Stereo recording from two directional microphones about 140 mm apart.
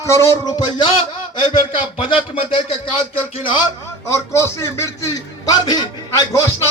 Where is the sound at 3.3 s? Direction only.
40° left (ahead or behind).